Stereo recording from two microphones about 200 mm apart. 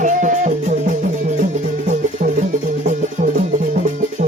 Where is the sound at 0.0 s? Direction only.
40° right (ahead or behind).